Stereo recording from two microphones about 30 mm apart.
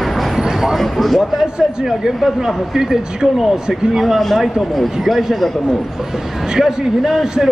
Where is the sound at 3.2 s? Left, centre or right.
Right.